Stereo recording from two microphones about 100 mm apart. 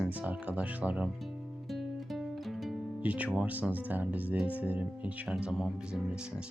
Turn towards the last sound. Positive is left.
turn(degrees=0)  # may be behind; listen again after turning